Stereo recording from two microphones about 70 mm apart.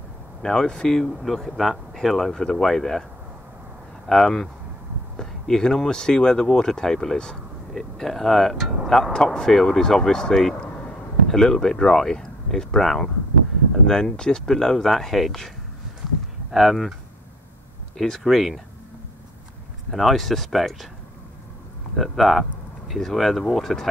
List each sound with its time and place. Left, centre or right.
0.4 s speech: centre
4.1 s speech: centre
10.7 s a sound: left
11.2 s speech: centre
16.5 s speech: centre
17.9 s speech: centre
19.9 s speech: centre
21.9 s speech: centre